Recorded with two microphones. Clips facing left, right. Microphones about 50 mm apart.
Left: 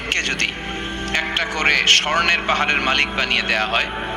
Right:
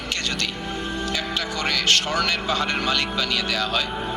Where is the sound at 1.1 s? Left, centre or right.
Left.